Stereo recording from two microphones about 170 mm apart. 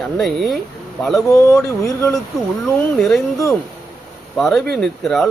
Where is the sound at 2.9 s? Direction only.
Centre (ahead or behind).